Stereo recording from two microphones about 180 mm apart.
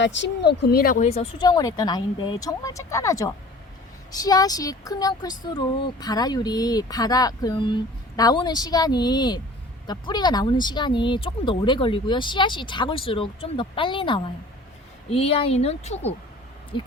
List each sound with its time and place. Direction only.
0.0 s speech: 80° left; by 16.1 s 35° left (ahead or behind)